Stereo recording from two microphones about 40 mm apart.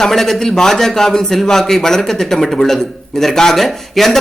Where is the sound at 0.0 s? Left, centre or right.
Centre.